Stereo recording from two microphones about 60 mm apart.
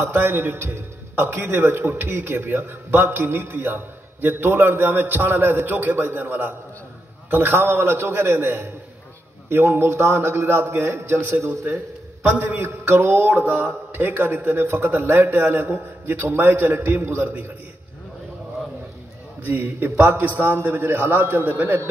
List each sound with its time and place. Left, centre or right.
0.0 s a man's voice: right
11.4 s a man's voice: right
12.3 s a man's voice: right
17.0 s a man's voice: right
19.4 s a man's voice: right